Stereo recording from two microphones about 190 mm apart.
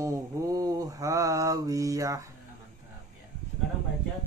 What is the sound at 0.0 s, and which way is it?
Mantra, 20° right (ahead or behind).